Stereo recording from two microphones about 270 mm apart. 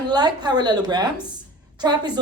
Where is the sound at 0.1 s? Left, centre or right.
Centre.